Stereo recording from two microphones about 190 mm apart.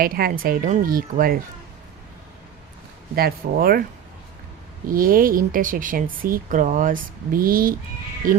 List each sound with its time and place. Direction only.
0.0 s speech: 50° right (ahead or behind)
3.2 s speech: 50° right (ahead or behind)
4.9 s speech: 50° right (ahead or behind)